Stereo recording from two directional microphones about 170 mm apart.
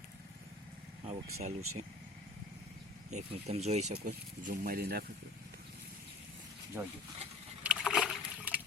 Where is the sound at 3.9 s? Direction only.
55° right (ahead or behind).